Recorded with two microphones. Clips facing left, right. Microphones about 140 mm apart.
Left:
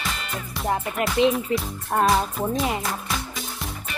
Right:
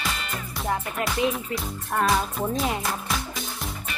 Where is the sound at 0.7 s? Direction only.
20° left (ahead or behind).